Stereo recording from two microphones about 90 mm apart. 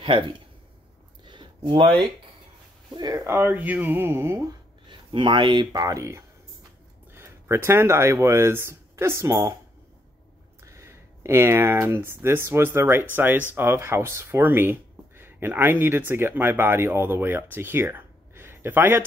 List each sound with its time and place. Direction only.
0.0 s speech: 65° right (ahead or behind)
1.2 s a sound: 60° right (ahead or behind)
2.9 s speech: 50° right (ahead or behind)
3.3 s speech: 25° right (ahead or behind)
4.0 s a sound: 30° right (ahead or behind)
4.8 s speech: 60° right (ahead or behind); by 9.4 s 30° right (ahead or behind)
10.6 s speech: 35° right (ahead or behind)